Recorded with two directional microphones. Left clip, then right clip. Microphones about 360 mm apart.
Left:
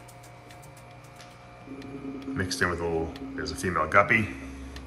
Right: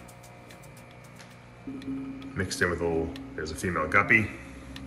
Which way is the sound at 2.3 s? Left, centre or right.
Centre.